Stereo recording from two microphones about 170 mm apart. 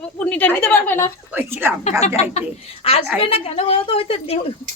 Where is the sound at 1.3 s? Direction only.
10° right (ahead or behind).